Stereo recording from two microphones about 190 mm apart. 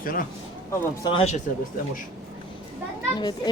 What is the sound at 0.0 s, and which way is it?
Speech, 50° left (ahead or behind).